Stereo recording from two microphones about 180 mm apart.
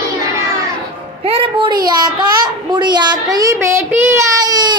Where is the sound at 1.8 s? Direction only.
25° right (ahead or behind).